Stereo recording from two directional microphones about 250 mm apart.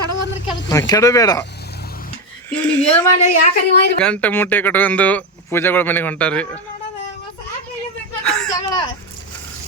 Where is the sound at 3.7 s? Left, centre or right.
Left.